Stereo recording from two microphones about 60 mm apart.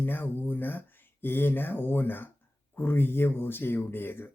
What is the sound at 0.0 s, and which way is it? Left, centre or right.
Speech, left.